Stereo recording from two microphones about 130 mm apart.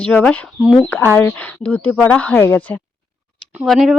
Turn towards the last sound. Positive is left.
turn(degrees=0)  # may be behind; listen again after turning